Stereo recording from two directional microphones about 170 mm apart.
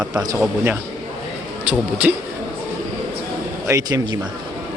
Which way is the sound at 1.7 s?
10° right (ahead or behind).